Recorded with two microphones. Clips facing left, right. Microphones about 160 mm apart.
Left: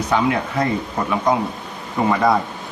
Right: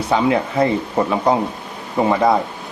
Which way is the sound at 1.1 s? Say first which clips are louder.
Right 1 dB; 30° right (ahead or behind).